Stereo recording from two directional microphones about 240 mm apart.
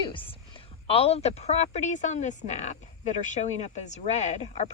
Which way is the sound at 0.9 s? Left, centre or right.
Left.